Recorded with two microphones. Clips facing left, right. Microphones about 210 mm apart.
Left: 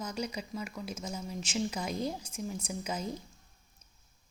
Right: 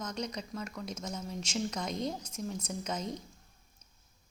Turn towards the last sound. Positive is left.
turn(degrees=5)  # may be behind; listen again after turning